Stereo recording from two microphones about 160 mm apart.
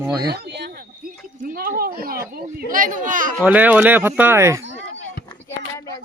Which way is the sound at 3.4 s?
10° right (ahead or behind).